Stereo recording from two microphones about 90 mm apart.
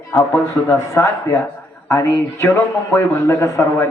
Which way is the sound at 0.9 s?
35° left (ahead or behind).